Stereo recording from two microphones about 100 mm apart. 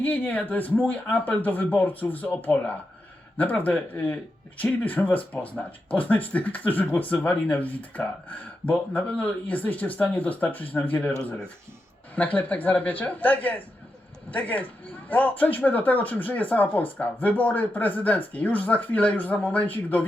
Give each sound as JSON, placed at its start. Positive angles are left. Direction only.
{"t": 0.0, "sound": "speech", "side_deg": 15}